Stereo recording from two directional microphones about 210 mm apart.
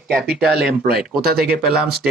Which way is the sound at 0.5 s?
50° right (ahead or behind).